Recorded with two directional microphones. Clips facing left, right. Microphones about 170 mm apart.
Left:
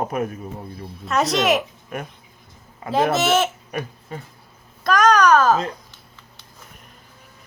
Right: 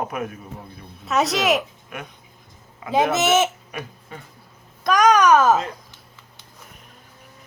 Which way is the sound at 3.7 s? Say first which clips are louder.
Left 5 dB; 40° left (ahead or behind).